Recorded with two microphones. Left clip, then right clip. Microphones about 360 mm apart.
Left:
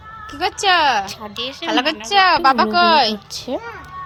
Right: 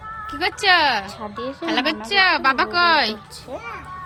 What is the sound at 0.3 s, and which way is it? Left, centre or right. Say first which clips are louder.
Speech: left 1 dB; centre.